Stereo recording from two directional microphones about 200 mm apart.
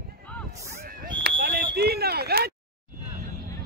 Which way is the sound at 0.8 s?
50° right (ahead or behind).